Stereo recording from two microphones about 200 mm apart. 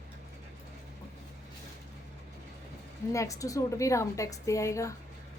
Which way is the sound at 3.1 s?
15° left (ahead or behind).